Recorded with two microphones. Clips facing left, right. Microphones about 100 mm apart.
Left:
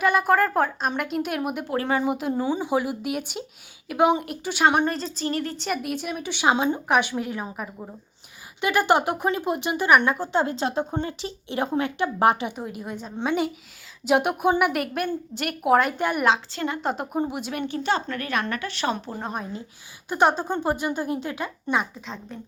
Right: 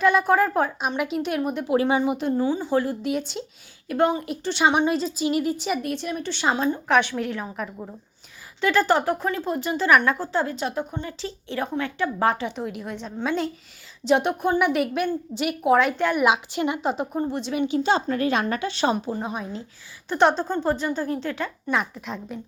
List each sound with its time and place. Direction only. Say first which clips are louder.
0.0 s a woman's voice: right 1 dB; 5° left (ahead or behind)
6.6 s a woman's voice: right 1 dB; 20° left (ahead or behind)
11.2 s a woman's voice: left 1 dB; 20° left (ahead or behind)
12.5 s a woman's voice: right 2 dB; 5° left (ahead or behind)
16.2 s a woman's voice: even; 15° right (ahead or behind)
16.8 s a woman's voice: right 2 dB; centre (ahead or behind)
17.2 s a woman's voice: even; 10° left (ahead or behind)
17.7 s speech: right 3 dB; 20° right (ahead or behind)
19.1 s a woman's voice: right 2 dB; centre (ahead or behind)